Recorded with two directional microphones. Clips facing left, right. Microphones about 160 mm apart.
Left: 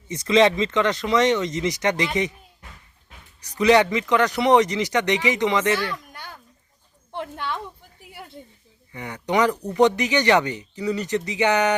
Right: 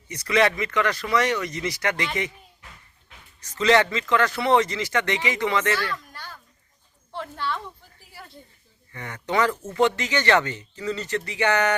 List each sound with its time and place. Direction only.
0.1 s speech: 20° left (ahead or behind)
3.4 s speech: 15° left (ahead or behind)
8.9 s speech: 15° left (ahead or behind)